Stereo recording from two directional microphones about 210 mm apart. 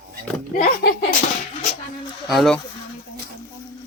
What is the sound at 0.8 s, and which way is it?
Slap, 50° left (ahead or behind).